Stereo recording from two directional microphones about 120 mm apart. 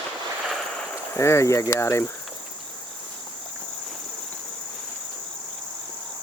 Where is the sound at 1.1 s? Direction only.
25° left (ahead or behind).